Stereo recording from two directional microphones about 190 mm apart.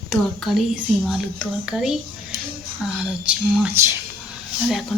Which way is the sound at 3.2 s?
10° right (ahead or behind).